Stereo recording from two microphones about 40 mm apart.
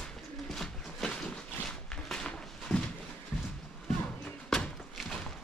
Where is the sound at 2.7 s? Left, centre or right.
Centre.